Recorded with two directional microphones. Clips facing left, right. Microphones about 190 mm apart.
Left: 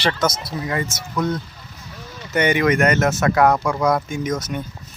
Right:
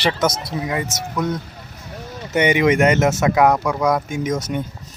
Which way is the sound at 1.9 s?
50° right (ahead or behind).